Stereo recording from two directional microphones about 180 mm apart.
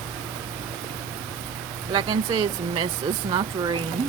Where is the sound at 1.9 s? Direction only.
30° right (ahead or behind).